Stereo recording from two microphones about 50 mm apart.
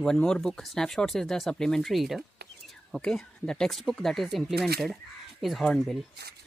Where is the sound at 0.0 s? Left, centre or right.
Centre.